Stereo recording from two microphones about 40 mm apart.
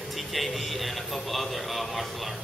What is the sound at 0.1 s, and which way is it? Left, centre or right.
Speech, centre.